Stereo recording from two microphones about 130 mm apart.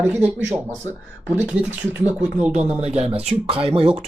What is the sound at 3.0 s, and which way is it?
Speech, 50° right (ahead or behind).